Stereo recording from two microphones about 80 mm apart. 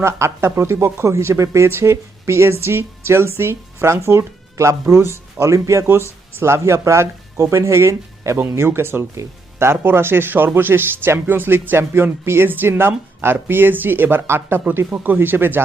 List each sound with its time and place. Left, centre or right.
0.0 s speech: right